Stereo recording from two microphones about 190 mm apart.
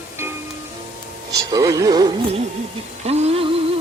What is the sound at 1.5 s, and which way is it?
Speech, 20° right (ahead or behind).